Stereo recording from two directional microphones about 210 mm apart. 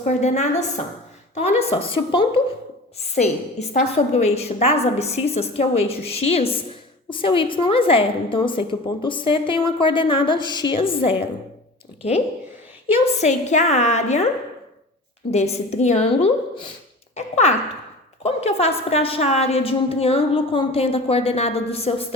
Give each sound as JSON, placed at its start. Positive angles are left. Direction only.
{"t": 0.0, "sound": "a woman's voice", "side_deg": 35}
{"t": 13.1, "sound": "a woman's voice", "side_deg": 35}
{"t": 15.3, "sound": "a woman's voice", "side_deg": 30}
{"t": 17.2, "sound": "a sound", "side_deg": 30}
{"t": 18.2, "sound": "a woman's voice", "side_deg": 30}